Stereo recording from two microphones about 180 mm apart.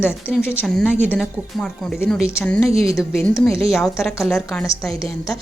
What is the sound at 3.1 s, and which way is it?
Speech, centre (ahead or behind).